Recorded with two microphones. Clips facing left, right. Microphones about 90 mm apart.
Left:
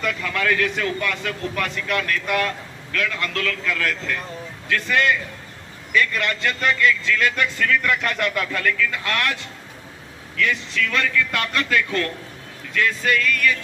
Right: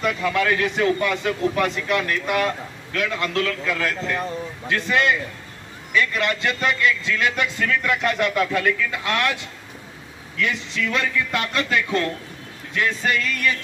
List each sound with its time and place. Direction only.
0.0 s a man's voice: 20° right (ahead or behind)
10.3 s a man's voice: 20° right (ahead or behind)